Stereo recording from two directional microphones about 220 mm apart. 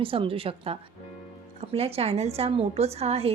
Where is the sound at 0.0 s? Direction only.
25° right (ahead or behind).